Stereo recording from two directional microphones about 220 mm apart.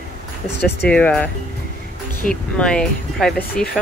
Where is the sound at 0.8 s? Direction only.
5° left (ahead or behind).